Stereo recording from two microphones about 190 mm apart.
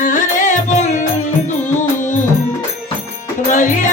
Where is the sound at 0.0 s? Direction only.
45° left (ahead or behind).